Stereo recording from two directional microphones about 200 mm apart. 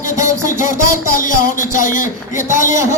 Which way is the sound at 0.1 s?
15° right (ahead or behind).